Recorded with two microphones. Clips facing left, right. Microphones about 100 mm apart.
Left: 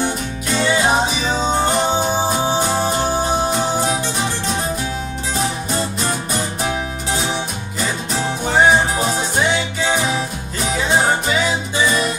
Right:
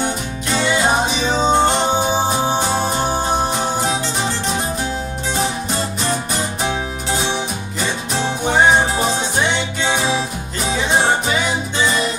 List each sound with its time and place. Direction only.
0.5 s music: centre (ahead or behind)
1.3 s music: 20° right (ahead or behind)